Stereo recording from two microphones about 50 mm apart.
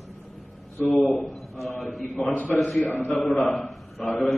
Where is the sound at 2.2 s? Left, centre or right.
Left.